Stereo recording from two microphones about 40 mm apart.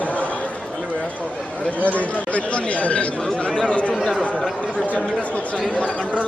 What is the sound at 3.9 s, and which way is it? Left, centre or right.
Speech, centre.